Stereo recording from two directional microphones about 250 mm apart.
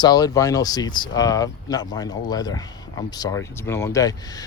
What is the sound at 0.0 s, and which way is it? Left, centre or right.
Speech, centre.